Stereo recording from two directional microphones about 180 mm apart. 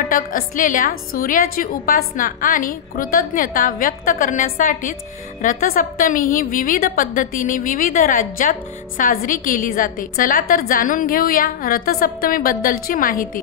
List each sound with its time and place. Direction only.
0.0 s a woman's voice: 50° left (ahead or behind)